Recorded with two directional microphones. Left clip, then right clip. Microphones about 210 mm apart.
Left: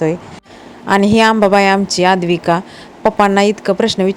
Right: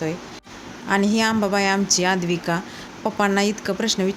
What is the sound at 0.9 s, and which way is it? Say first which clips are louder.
A woman's voice: left 10 dB; 40° left (ahead or behind).